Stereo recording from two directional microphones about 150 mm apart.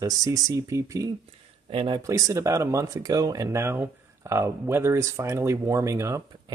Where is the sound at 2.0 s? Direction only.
20° right (ahead or behind).